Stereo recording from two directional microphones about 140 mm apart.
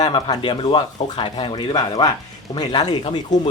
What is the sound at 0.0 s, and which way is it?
Speech, 30° left (ahead or behind).